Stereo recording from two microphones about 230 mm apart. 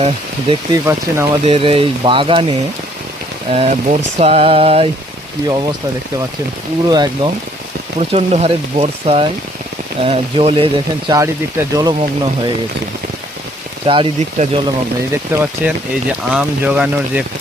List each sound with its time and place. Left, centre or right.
0.0 s speech: right
0.9 s speech: centre
1.5 s speech: right
6.8 s speech: centre
7.9 s speech: right
13.8 s speech: right
15.1 s speech: centre